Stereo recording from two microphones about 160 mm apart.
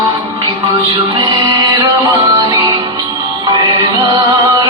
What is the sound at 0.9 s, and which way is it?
Music, 30° right (ahead or behind).